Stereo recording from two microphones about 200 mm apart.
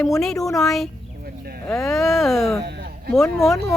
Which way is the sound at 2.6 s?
55° right (ahead or behind).